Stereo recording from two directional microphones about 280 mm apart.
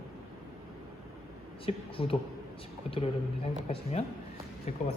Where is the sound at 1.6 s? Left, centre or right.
Centre.